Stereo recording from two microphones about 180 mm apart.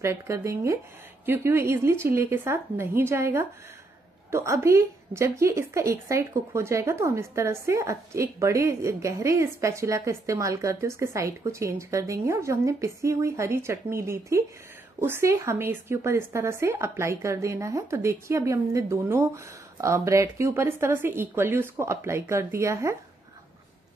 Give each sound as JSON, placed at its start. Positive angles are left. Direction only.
{"t": 0.0, "sound": "a woman's voice", "side_deg": -15}